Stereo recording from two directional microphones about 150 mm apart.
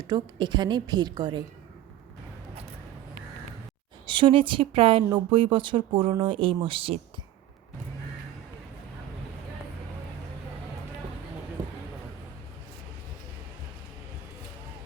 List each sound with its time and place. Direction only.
0.1 s a woman's voice: 30° right (ahead or behind)
4.0 s speech: 35° right (ahead or behind)